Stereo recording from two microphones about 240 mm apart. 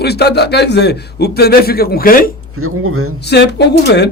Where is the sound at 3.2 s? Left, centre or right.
Left.